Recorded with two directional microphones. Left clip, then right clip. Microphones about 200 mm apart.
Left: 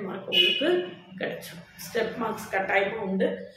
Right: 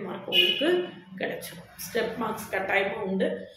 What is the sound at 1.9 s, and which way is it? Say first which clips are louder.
A woman's voice: even; 5° right (ahead or behind).